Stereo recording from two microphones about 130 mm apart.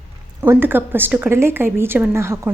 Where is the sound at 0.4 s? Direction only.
15° right (ahead or behind).